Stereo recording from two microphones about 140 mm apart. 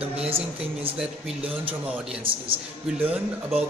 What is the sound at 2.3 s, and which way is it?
Speech, 40° right (ahead or behind).